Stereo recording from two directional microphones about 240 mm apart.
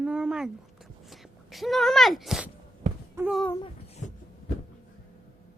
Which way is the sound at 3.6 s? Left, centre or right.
Left.